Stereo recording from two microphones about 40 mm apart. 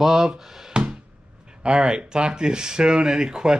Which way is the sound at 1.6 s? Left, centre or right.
Right.